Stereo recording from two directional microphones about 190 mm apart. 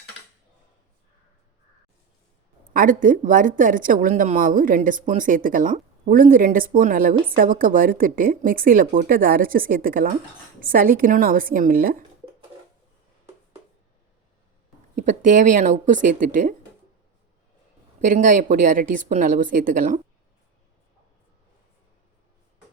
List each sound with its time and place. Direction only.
2.7 s speech: 45° right (ahead or behind)
14.9 s speech: 40° right (ahead or behind)
18.0 s speech: 40° right (ahead or behind)